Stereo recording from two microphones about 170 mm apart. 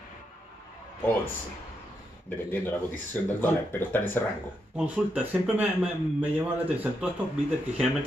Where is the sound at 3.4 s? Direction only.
10° left (ahead or behind).